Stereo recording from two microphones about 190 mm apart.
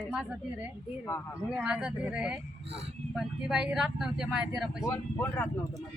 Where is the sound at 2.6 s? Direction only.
30° right (ahead or behind).